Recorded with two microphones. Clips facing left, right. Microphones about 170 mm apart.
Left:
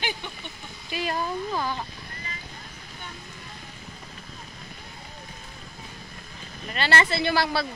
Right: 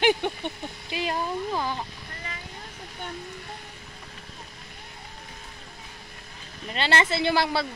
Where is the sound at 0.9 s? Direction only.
15° right (ahead or behind).